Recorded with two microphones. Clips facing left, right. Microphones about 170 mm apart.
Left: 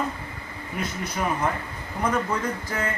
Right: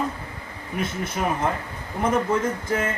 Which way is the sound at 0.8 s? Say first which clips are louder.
Right 2 dB; 25° right (ahead or behind).